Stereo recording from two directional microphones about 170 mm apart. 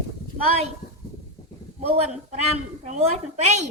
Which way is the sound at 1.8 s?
40° right (ahead or behind).